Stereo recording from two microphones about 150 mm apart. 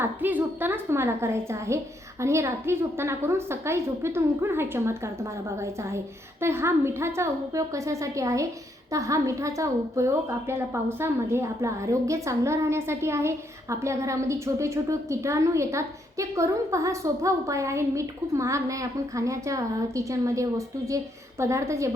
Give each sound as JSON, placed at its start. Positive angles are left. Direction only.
{"t": 0.0, "sound": "a woman's voice", "side_deg": -10}